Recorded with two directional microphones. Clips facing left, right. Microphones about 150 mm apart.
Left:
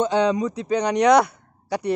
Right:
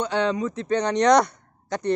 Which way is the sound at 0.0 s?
15° left (ahead or behind).